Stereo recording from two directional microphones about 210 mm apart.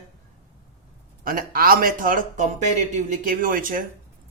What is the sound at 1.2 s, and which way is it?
A man's voice, 40° right (ahead or behind).